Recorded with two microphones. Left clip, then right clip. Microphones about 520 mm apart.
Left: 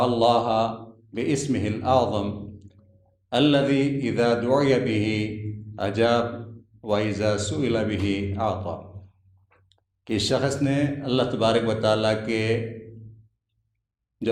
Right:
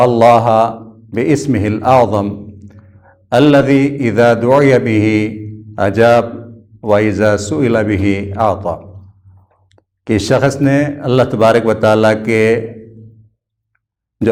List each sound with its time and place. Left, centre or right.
0.1 s a man's voice: right